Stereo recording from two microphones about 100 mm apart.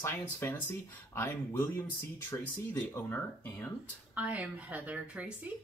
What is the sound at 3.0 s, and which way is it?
Speech, 20° left (ahead or behind).